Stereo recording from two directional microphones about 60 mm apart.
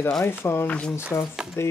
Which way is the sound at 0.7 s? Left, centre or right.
Centre.